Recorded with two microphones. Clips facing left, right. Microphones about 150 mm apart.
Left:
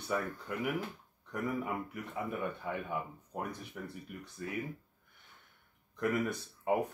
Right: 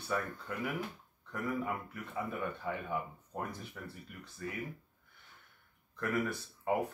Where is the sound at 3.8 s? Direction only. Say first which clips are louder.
Left 3 dB; 15° left (ahead or behind).